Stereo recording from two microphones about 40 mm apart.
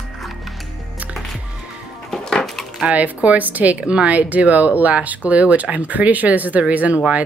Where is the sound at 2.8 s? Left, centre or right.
Right.